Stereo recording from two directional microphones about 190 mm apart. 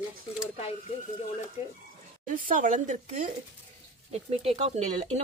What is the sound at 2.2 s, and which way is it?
Speech, 45° right (ahead or behind).